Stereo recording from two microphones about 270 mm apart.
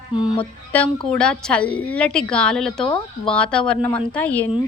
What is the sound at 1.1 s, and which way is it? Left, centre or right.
A woman's voice, centre.